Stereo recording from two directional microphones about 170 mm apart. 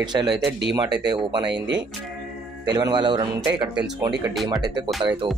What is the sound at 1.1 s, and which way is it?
Speech, 25° right (ahead or behind).